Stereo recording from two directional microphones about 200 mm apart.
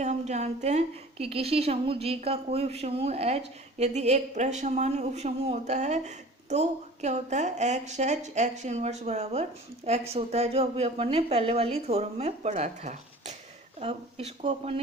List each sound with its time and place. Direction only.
0.0 s a woman's voice: 35° right (ahead or behind)